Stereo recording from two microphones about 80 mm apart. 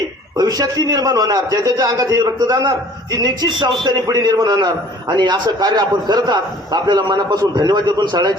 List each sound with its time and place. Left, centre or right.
0.3 s a man's voice: right
4.3 s a man's voice: right